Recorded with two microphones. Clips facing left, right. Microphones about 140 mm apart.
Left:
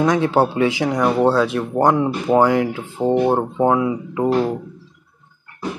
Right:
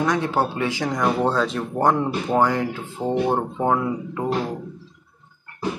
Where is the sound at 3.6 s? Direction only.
5° left (ahead or behind).